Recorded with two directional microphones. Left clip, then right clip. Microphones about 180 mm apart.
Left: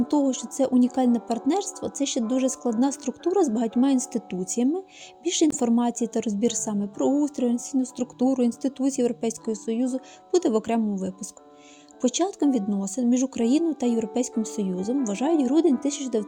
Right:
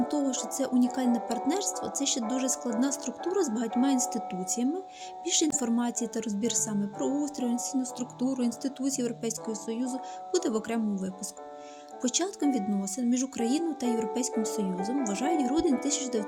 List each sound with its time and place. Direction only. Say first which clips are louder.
0.1 s speech: left 6 dB; 25° left (ahead or behind)
12.0 s speech: left 5 dB; 25° left (ahead or behind)